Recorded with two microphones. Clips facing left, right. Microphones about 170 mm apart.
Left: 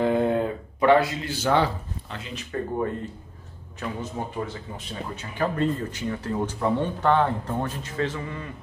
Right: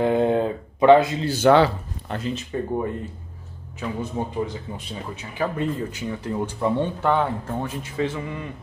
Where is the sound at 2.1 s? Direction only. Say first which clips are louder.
Right 9 dB; 55° right (ahead or behind).